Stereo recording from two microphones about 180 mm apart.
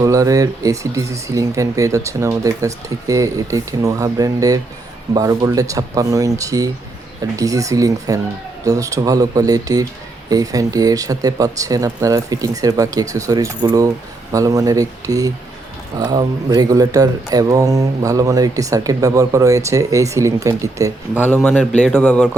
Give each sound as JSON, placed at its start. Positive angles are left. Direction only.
{"t": 0.0, "sound": "speech", "side_deg": -20}
{"t": 21.2, "sound": "a man's voice", "side_deg": 10}